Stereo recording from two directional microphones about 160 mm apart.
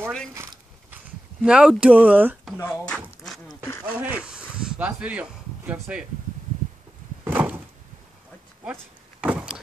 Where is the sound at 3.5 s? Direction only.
15° left (ahead or behind).